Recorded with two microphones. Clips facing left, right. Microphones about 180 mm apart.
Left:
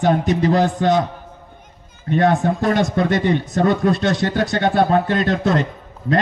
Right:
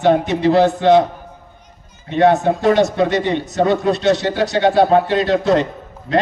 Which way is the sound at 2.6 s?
45° left (ahead or behind).